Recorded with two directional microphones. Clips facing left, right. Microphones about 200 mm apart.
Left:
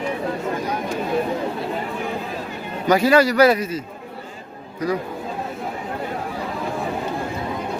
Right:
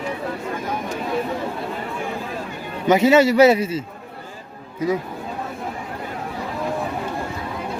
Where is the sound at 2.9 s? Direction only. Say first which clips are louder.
Right 2 dB; 20° right (ahead or behind).